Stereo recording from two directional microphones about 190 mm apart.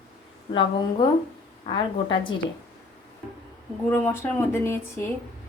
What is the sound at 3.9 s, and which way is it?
Speech, 10° left (ahead or behind).